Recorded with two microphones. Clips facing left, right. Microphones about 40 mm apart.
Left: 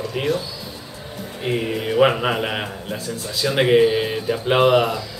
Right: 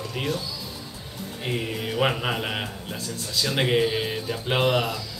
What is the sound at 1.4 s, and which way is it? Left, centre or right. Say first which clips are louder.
A man's voice: left 6 dB; centre.